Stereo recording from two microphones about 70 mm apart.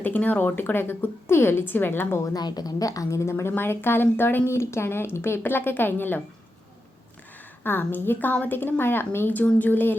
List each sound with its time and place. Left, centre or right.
0.0 s a woman's voice: left
2.2 s a woman's voice: left
3.5 s a woman's voice: left
4.4 s a woman's voice: left
7.6 s a woman's voice: left